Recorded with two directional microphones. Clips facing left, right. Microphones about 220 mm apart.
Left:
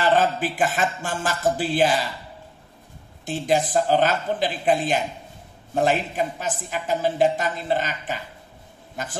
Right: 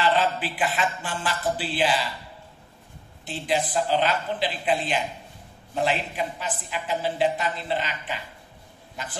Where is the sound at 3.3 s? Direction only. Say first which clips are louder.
Left 5 dB; 45° left (ahead or behind).